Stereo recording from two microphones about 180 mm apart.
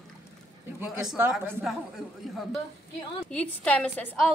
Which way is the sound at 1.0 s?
5° right (ahead or behind).